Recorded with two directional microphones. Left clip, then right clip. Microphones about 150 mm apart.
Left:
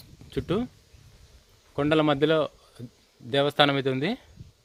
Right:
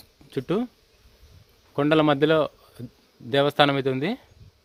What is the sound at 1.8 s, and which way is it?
Speech, 25° right (ahead or behind).